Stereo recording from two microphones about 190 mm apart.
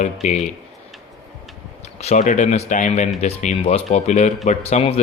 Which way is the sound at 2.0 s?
35° left (ahead or behind).